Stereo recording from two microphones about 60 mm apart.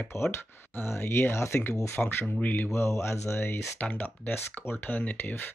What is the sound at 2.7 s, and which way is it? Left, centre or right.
Speech, left.